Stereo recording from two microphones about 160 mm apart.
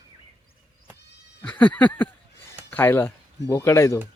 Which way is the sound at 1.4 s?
10° left (ahead or behind).